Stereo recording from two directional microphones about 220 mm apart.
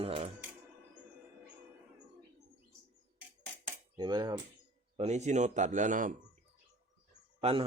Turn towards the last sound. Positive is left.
turn(degrees=-25)  # may be behind; listen again after turning